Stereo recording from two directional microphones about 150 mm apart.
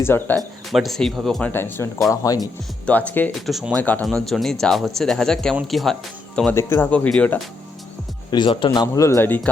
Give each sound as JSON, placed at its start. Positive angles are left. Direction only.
{"t": 0.0, "sound": "speech", "side_deg": 15}
{"t": 0.3, "sound": "speech", "side_deg": 0}
{"t": 2.4, "sound": "speech", "side_deg": 10}
{"t": 3.4, "sound": "speech", "side_deg": 0}
{"t": 6.5, "sound": "speech", "side_deg": 15}
{"t": 8.3, "sound": "speech", "side_deg": 30}